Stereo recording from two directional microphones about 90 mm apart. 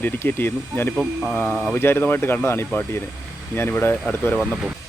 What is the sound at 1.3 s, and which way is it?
Speech, 10° left (ahead or behind).